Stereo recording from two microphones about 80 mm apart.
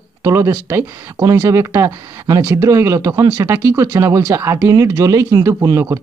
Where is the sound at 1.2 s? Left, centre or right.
Right.